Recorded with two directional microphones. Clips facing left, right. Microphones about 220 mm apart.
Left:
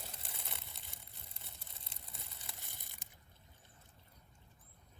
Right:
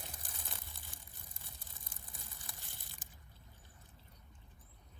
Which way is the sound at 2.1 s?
15° right (ahead or behind).